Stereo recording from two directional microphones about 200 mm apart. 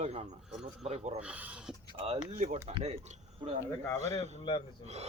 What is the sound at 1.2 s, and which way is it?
Speech, 5° right (ahead or behind).